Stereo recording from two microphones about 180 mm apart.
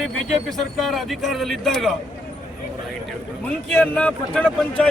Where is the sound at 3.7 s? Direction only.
5° left (ahead or behind).